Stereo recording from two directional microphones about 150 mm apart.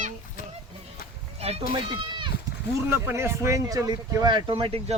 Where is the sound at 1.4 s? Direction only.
40° right (ahead or behind).